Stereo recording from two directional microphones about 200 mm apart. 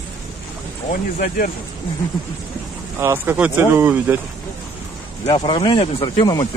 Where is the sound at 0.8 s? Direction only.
45° left (ahead or behind).